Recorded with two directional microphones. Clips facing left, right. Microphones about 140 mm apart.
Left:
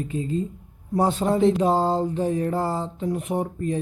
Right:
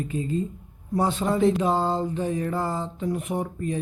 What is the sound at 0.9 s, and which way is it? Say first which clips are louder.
Speech: left 2 dB; 40° left (ahead or behind).